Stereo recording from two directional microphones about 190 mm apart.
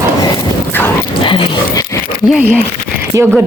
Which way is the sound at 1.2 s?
25° left (ahead or behind).